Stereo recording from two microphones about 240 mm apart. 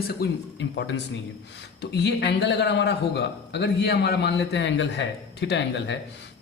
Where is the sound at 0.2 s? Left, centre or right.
Left.